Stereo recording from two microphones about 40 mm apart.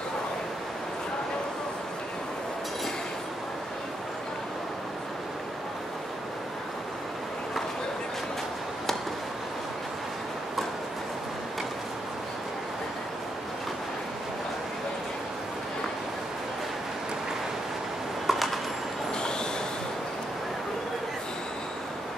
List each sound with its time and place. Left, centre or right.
18.2 s train: centre